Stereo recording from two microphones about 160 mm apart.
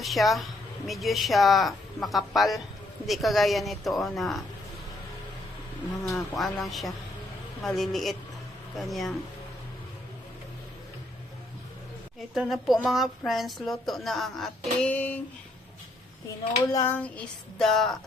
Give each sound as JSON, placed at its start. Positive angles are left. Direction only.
{"t": 0.0, "sound": "speech", "side_deg": 0}
{"t": 6.1, "sound": "speech", "side_deg": 0}
{"t": 12.3, "sound": "speech", "side_deg": 0}
{"t": 16.6, "sound": "a sound", "side_deg": 20}
{"t": 16.9, "sound": "speech", "side_deg": 10}